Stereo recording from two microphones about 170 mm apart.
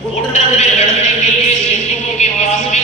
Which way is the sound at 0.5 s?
40° left (ahead or behind).